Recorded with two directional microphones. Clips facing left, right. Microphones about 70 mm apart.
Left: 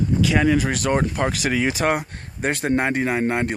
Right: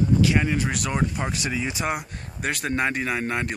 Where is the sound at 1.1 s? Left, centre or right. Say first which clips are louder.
Left 6 dB; left.